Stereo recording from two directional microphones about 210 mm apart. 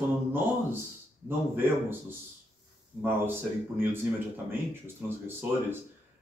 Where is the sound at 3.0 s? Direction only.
10° right (ahead or behind).